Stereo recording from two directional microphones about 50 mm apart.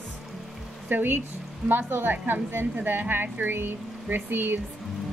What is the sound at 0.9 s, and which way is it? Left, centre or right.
A woman's voice, right.